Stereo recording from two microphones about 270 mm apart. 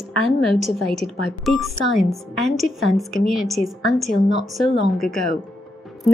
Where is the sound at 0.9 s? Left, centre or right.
Centre.